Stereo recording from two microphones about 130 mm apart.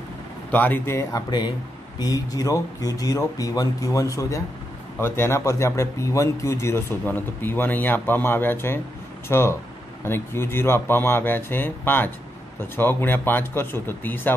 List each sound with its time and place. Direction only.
0.5 s speech: 15° left (ahead or behind)